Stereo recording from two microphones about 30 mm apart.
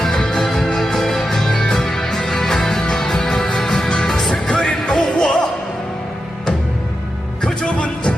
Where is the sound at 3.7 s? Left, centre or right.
Left.